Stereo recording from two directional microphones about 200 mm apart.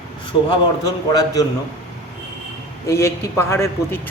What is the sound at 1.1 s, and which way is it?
Speech, 20° left (ahead or behind).